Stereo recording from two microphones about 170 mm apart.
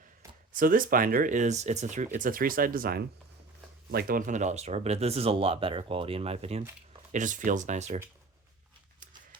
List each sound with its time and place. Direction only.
0.5 s speech: 55° right (ahead or behind)
2.1 s speech: 55° right (ahead or behind); by 6.7 s 35° right (ahead or behind)
7.1 s speech: 50° right (ahead or behind)